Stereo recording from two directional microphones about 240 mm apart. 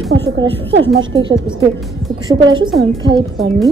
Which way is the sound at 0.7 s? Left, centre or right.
Right.